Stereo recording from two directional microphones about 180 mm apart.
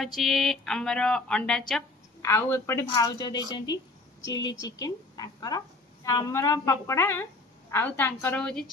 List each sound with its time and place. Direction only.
0.0 s speech: centre (ahead or behind)
2.2 s a woman's voice: 15° left (ahead or behind)